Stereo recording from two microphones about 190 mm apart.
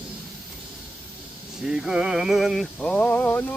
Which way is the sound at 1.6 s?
5° right (ahead or behind).